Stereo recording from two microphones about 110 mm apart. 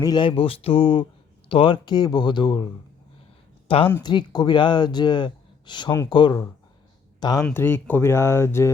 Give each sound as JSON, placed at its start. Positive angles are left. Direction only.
{"t": 0.0, "sound": "speech", "side_deg": 40}
{"t": 3.7, "sound": "speech", "side_deg": 55}
{"t": 4.0, "sound": "speech", "side_deg": 40}
{"t": 7.5, "sound": "speech", "side_deg": 20}